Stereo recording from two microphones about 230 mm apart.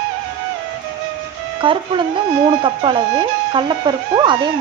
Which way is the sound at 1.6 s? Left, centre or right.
Right.